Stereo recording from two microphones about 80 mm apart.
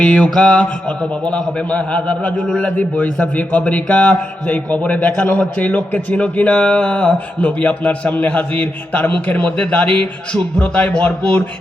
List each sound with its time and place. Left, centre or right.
0.0 s a man's voice: centre